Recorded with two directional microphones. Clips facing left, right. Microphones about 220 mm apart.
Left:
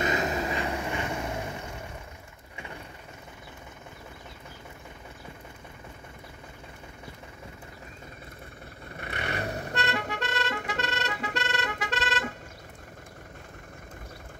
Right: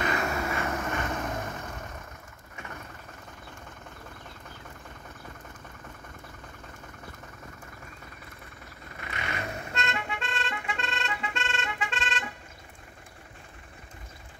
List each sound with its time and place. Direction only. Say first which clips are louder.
0.0 s vehicle: left 2 dB; 20° left (ahead or behind)
9.0 s music: left 3 dB; 35° left (ahead or behind)